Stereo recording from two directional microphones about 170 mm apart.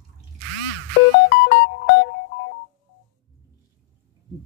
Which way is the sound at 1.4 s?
90° left.